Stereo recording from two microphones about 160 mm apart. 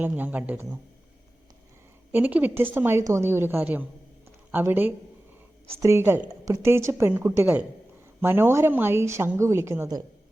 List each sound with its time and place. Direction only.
0.0 s a woman's voice: 10° right (ahead or behind)
2.1 s a woman's voice: 10° right (ahead or behind)